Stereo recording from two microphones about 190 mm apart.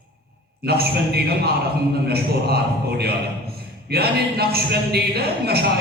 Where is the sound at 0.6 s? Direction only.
55° right (ahead or behind).